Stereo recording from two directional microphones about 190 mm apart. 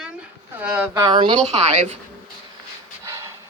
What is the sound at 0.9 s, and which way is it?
A woman's voice, 25° right (ahead or behind).